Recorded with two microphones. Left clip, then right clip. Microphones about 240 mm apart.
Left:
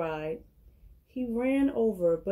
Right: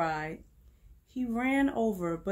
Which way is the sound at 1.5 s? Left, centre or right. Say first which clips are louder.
Left 1 dB; right.